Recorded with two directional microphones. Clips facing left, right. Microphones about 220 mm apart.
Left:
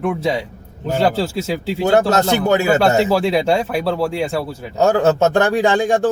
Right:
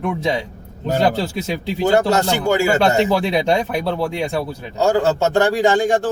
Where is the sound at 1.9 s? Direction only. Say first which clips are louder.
Left 4 dB; 20° left (ahead or behind).